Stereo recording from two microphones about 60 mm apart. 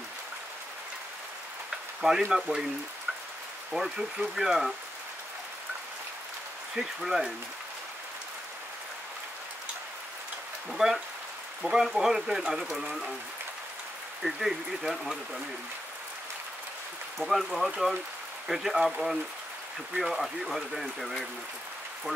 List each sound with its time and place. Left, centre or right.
2.0 s speech: centre
3.7 s speech: centre
6.7 s speech: centre
10.7 s speech: centre
14.2 s speech: centre
17.2 s speech: centre